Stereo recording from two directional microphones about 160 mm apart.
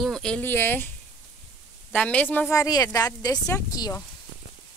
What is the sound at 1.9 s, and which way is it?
A woman's voice, 10° left (ahead or behind).